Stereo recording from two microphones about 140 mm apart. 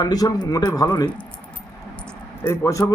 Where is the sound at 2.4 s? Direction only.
20° left (ahead or behind).